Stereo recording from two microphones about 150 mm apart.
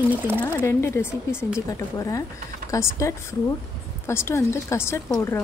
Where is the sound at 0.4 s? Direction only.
15° left (ahead or behind).